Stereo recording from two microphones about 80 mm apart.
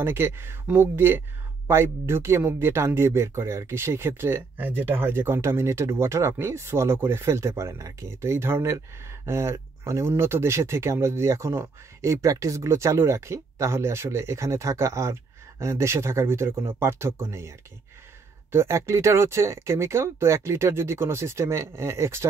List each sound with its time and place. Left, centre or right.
0.0 s speech: right